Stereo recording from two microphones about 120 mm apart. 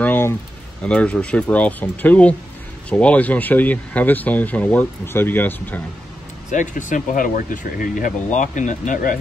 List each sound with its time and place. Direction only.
0.0 s a sound: 20° left (ahead or behind)
0.8 s speech: 10° left (ahead or behind)
6.5 s speech: 90° left